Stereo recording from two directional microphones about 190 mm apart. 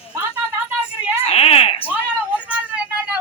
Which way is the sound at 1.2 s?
30° left (ahead or behind).